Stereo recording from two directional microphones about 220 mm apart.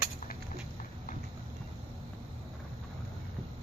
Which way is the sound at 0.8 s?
40° left (ahead or behind).